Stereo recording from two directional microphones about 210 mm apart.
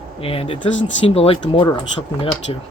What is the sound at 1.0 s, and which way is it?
Speech, 30° left (ahead or behind).